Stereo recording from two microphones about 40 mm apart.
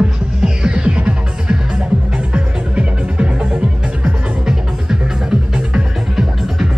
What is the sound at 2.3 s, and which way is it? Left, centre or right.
Music, right.